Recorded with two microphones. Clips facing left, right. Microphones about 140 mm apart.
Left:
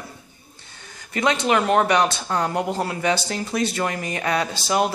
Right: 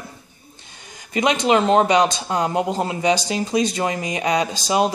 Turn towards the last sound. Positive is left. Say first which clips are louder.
# right 2 dB
turn(degrees=-20)  # may be behind; listen again after turning